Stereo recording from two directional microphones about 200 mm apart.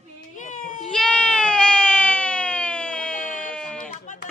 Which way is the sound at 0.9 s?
5° left (ahead or behind).